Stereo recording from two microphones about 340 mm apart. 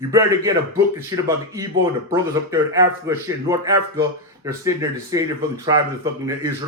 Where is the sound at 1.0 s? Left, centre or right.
Centre.